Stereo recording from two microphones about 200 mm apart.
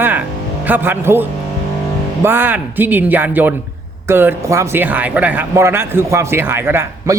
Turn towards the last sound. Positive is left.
turn(degrees=-10)  # may be behind; listen again after turning